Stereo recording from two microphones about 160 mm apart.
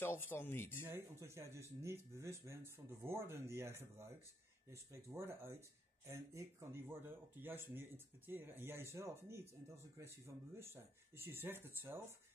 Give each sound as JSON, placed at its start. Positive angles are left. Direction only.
{"t": 0.0, "sound": "speech", "side_deg": 15}
{"t": 0.8, "sound": "speech", "side_deg": -15}